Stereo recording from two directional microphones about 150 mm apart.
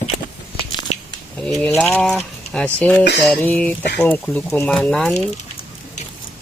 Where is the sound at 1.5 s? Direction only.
10° left (ahead or behind).